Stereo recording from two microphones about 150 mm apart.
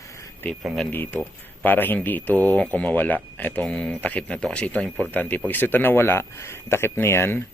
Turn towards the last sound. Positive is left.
turn(degrees=15)  # may be behind; listen again after turning